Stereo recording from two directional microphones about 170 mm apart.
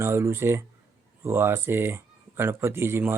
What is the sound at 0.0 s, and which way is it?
Speech, 15° right (ahead or behind).